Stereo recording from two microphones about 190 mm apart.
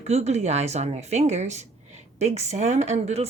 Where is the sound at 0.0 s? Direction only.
35° right (ahead or behind).